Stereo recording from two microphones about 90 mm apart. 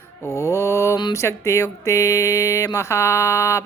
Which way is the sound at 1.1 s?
35° left (ahead or behind).